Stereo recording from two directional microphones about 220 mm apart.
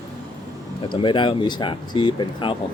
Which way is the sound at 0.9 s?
20° left (ahead or behind).